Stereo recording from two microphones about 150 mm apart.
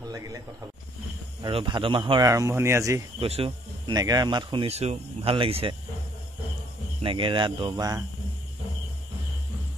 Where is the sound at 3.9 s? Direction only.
25° right (ahead or behind).